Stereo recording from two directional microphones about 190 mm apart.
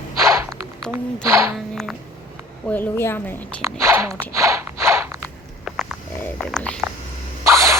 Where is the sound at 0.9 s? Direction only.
15° right (ahead or behind).